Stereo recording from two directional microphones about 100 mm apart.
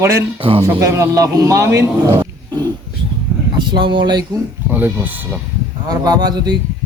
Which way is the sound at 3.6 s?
50° right (ahead or behind).